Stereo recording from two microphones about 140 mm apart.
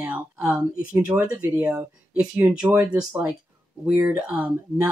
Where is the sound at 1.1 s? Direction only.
10° right (ahead or behind).